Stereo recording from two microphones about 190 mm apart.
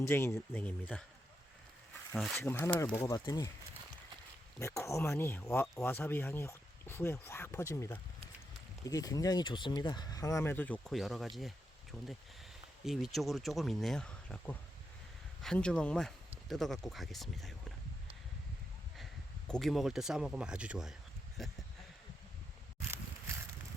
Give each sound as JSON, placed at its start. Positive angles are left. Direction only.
{"t": 0.0, "sound": "speech", "side_deg": 15}
{"t": 2.1, "sound": "speech", "side_deg": 0}
{"t": 2.4, "sound": "speech", "side_deg": 10}
{"t": 4.6, "sound": "speech", "side_deg": 15}
{"t": 19.5, "sound": "speech", "side_deg": 0}